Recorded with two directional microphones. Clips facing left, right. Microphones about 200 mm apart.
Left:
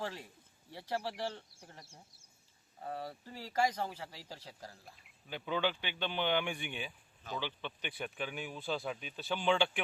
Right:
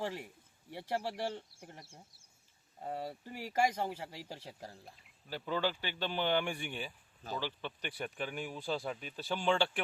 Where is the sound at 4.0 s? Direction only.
25° right (ahead or behind).